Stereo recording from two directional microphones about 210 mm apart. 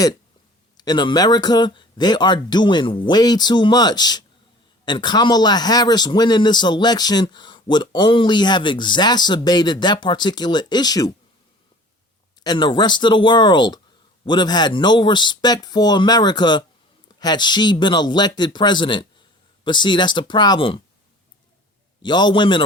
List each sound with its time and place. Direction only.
0.8 s speech: 20° left (ahead or behind)
12.4 s speech: 20° left (ahead or behind)
22.0 s speech: 20° left (ahead or behind)